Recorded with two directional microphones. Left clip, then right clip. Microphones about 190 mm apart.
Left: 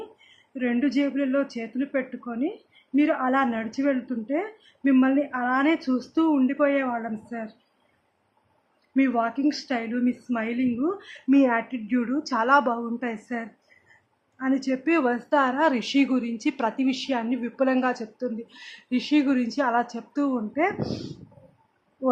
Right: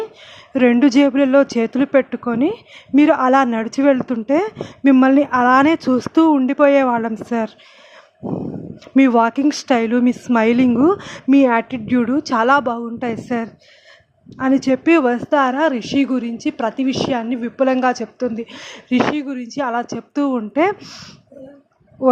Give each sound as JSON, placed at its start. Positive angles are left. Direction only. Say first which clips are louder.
{"t": 0.5, "sound": "speech", "louder": "right 12 dB", "side_deg": -45}
{"t": 9.0, "sound": "a woman's voice", "louder": "right 10 dB", "side_deg": -45}